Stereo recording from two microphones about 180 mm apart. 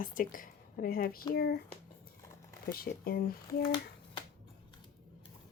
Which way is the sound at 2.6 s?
55° left (ahead or behind).